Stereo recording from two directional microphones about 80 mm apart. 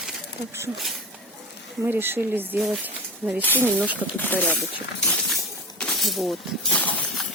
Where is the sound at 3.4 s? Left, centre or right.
Left.